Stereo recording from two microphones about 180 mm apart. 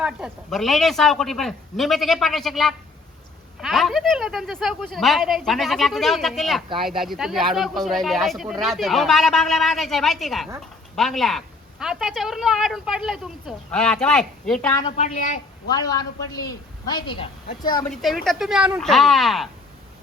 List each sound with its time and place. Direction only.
0.0 s a woman's voice: 5° right (ahead or behind)
14.7 s a man's voice: 20° left (ahead or behind)
14.9 s a woman's voice: 40° left (ahead or behind)
15.7 s a man's voice: 20° left (ahead or behind)
17.8 s a woman's voice: centre (ahead or behind)